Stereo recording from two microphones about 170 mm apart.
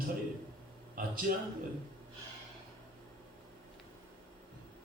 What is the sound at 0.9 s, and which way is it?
Speech, 55° right (ahead or behind).